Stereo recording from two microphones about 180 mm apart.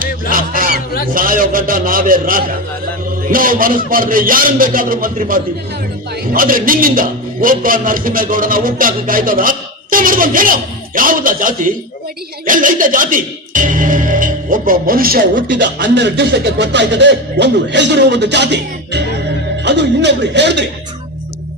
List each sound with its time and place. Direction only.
0.3 s honk: 50° right (ahead or behind)
1.1 s a man's voice: 50° right (ahead or behind)
15.4 s speech: 80° right